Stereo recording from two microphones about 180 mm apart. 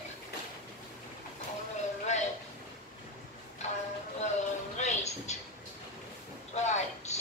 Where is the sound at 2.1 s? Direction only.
40° left (ahead or behind).